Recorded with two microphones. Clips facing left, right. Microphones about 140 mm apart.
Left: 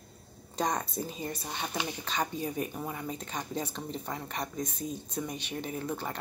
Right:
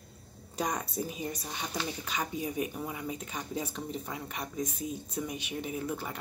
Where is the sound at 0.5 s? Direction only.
10° right (ahead or behind).